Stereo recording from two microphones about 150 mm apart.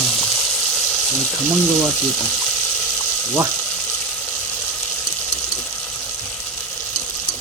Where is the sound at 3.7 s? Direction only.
5° left (ahead or behind).